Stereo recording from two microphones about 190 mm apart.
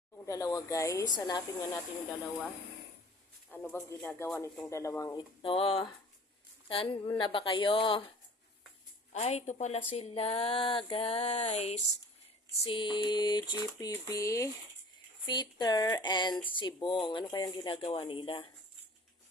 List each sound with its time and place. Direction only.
0.3 s speech: 15° left (ahead or behind)
3.5 s speech: 10° left (ahead or behind)
5.4 s typewriter: 30° left (ahead or behind)
9.1 s speech: 35° left (ahead or behind)
12.6 s typewriter: 25° left (ahead or behind)